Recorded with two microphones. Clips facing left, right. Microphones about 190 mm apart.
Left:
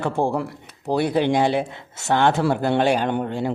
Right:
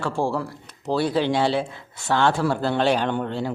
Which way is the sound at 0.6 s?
10° left (ahead or behind).